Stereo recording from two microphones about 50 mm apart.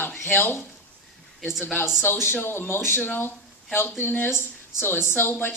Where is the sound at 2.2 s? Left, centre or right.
Left.